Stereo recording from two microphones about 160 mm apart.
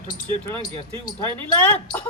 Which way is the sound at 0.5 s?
30° right (ahead or behind).